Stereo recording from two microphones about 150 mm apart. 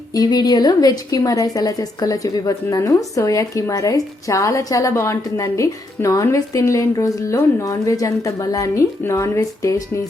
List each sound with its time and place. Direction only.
0.1 s a woman's voice: 25° left (ahead or behind)